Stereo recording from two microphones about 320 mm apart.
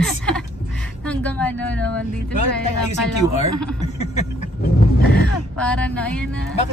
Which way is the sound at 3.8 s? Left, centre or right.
Centre.